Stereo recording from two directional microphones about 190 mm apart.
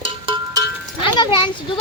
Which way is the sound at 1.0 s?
25° left (ahead or behind).